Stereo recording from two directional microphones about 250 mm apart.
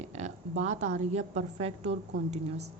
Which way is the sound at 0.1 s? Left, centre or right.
Right.